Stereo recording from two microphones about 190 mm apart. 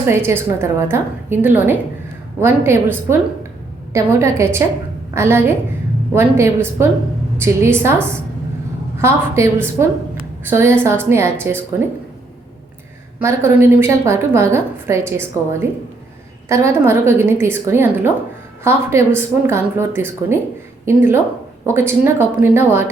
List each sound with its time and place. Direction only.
0.1 s a woman's voice: 10° right (ahead or behind)
13.1 s a woman's voice: 10° right (ahead or behind)